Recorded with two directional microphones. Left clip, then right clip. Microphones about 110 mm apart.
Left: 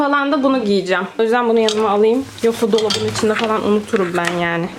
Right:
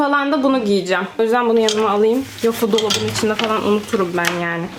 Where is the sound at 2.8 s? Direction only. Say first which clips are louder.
Left 1 dB; 15° left (ahead or behind).